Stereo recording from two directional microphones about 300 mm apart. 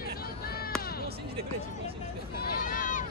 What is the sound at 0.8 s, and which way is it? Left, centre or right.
Music, left.